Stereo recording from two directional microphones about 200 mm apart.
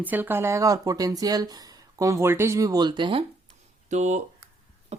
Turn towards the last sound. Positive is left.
turn(degrees=-30)  # may be behind; listen again after turning